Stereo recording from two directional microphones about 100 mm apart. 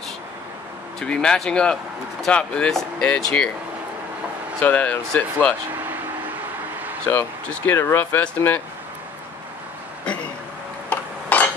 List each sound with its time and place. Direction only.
0.9 s speech: 10° left (ahead or behind)
4.6 s speech: 15° left (ahead or behind)
7.1 s speech: 20° left (ahead or behind)
10.9 s a sound: 15° left (ahead or behind)